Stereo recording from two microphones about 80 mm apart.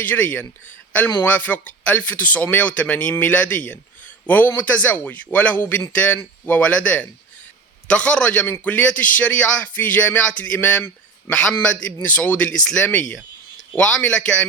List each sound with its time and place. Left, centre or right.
0.0 s speech: left